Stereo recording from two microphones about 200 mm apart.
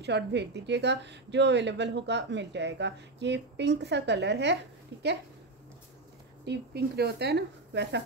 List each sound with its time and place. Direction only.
0.0 s a woman's voice: 60° right (ahead or behind)
6.4 s a woman's voice: 55° right (ahead or behind)